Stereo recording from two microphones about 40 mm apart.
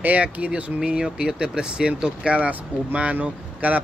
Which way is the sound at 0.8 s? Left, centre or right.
Right.